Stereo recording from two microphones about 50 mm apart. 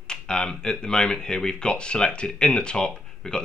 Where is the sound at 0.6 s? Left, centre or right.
Centre.